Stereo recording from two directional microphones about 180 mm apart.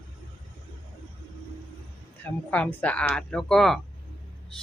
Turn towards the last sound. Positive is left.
turn(degrees=0)  # may be behind; listen again after turning